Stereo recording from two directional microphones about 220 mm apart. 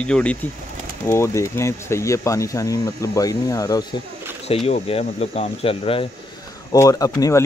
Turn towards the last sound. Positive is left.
turn(degrees=15)  # may be behind; listen again after turning